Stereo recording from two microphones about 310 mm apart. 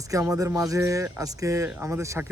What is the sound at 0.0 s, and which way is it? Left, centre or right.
Speech, centre.